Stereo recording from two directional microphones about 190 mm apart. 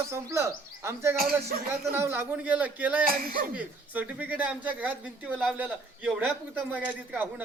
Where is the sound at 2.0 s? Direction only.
10° right (ahead or behind).